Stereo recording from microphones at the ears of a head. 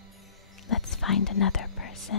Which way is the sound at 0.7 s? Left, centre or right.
Left.